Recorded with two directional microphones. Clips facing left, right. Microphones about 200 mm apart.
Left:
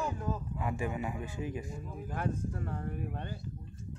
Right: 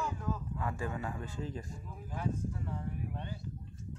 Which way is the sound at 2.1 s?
65° left (ahead or behind).